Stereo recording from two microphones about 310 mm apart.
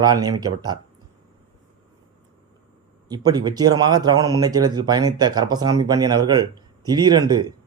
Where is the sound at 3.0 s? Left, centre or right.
Centre.